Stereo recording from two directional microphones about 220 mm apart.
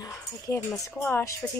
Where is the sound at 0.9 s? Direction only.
10° left (ahead or behind).